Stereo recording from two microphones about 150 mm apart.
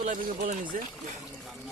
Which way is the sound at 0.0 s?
65° right (ahead or behind).